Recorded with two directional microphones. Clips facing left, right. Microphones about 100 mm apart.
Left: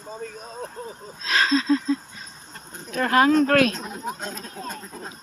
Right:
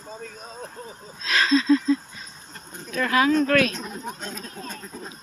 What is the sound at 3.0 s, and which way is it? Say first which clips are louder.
Speech: left 2 dB; 45° left (ahead or behind).